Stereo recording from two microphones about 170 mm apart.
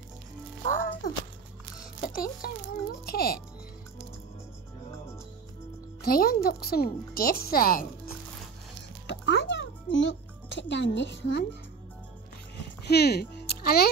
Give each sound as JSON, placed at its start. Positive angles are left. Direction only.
{"t": 0.7, "sound": "music", "side_deg": 55}
{"t": 2.0, "sound": "a child's voice", "side_deg": 60}
{"t": 6.0, "sound": "a child's voice", "side_deg": 60}
{"t": 9.0, "sound": "music", "side_deg": 90}
{"t": 12.8, "sound": "speech", "side_deg": 70}